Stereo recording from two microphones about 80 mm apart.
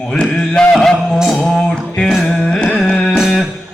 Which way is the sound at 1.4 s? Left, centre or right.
Centre.